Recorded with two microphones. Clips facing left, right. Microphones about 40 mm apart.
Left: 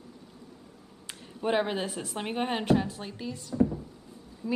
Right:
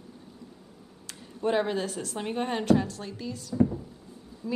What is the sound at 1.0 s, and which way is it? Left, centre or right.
A woman's voice, centre.